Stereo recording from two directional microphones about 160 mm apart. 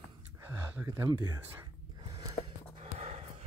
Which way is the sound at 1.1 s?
25° right (ahead or behind).